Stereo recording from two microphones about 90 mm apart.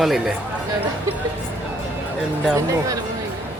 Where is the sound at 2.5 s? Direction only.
40° right (ahead or behind).